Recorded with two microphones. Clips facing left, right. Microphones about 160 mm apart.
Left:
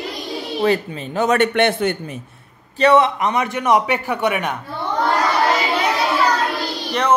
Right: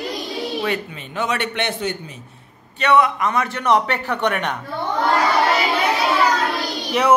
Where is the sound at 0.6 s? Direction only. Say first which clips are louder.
Left 6 dB; 35° left (ahead or behind); by 2.1 s 55° left (ahead or behind).